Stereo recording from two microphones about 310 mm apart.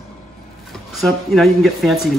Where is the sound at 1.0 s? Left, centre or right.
Centre.